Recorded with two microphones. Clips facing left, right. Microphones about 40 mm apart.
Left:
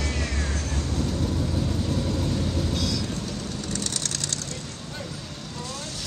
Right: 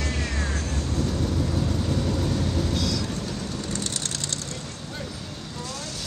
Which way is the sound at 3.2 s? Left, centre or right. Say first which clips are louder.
Right 1 dB; right.